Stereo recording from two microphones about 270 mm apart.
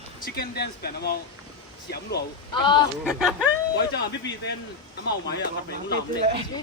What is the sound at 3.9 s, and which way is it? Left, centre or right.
Speech, left.